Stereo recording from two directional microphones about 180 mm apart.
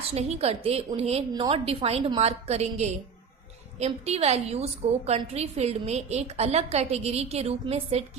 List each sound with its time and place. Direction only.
0.1 s a woman's voice: 35° right (ahead or behind)